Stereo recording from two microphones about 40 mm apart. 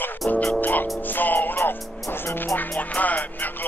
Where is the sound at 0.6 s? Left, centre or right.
Left.